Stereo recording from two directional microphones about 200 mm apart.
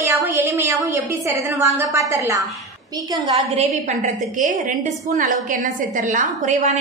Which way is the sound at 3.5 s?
40° right (ahead or behind).